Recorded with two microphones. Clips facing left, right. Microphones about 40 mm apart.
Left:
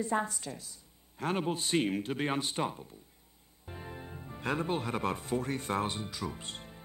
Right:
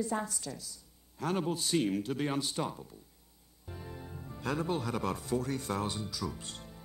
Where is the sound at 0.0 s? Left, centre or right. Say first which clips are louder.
Left 2 dB; left.